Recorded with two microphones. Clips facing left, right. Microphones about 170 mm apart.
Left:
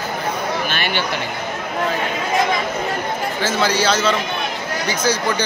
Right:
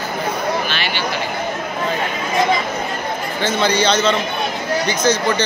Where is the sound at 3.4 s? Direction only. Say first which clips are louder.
Right 2 dB; 5° left (ahead or behind).